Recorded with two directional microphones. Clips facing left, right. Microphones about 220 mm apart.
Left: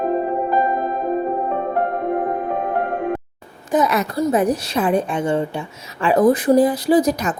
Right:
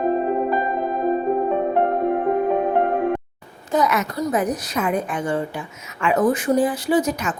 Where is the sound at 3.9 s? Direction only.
30° left (ahead or behind).